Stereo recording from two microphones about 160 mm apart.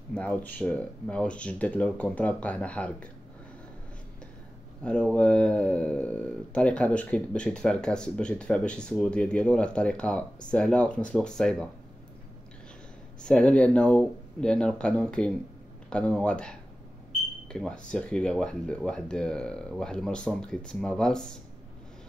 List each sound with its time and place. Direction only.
0.1 s speech: 5° left (ahead or behind)
4.8 s speech: 5° left (ahead or behind)
13.2 s speech: 5° left (ahead or behind)